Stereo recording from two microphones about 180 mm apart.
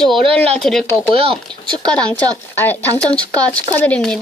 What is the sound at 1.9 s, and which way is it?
Speech, 5° left (ahead or behind).